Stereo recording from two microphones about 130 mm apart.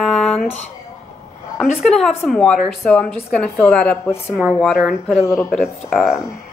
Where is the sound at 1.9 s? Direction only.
5° left (ahead or behind).